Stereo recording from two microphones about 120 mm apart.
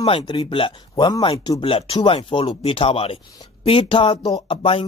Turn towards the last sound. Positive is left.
turn(degrees=50)  # may be behind; listen again after turning